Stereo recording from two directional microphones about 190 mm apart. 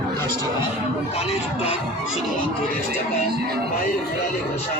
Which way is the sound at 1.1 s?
30° left (ahead or behind).